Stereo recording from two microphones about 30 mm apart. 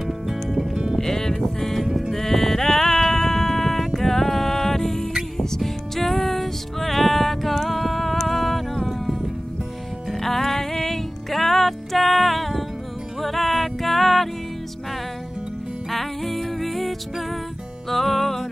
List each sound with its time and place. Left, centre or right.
0.0 s music: centre
0.9 s music: centre
1.6 s cattle: centre
2.1 s music: centre
8.3 s a sound: centre
10.1 s music: centre
15.9 s music: centre